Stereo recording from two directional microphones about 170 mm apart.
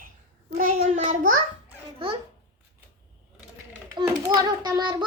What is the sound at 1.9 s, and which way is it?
Speech, 30° right (ahead or behind).